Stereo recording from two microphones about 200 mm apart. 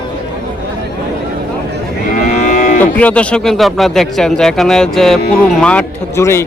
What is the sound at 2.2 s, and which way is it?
Moo, 40° left (ahead or behind).